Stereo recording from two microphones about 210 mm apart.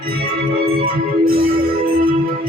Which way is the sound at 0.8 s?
45° right (ahead or behind).